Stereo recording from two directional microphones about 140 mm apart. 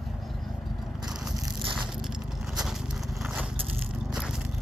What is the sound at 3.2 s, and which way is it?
Crushing, 5° right (ahead or behind).